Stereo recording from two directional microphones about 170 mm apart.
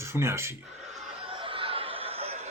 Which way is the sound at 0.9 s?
35° right (ahead or behind).